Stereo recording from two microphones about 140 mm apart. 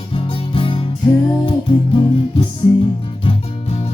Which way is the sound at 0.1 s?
40° left (ahead or behind).